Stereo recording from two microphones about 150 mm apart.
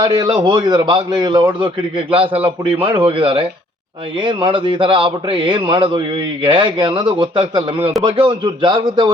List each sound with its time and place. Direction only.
0.0 s a man's voice: 30° right (ahead or behind)
2.8 s a man's voice: 35° right (ahead or behind)